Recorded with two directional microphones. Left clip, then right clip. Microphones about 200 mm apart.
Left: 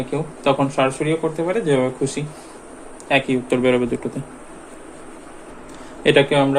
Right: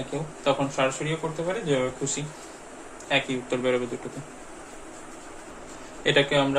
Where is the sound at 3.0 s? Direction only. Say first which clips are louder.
Left 7 dB; 50° left (ahead or behind).